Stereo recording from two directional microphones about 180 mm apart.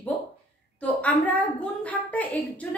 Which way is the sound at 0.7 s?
10° left (ahead or behind).